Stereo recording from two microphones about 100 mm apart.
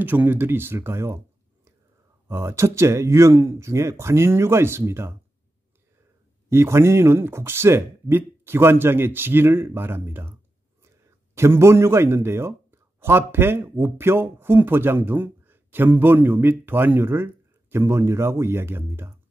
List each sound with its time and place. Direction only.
0.0 s speech: 20° right (ahead or behind)
6.5 s speech: 25° right (ahead or behind)
11.3 s speech: 25° right (ahead or behind)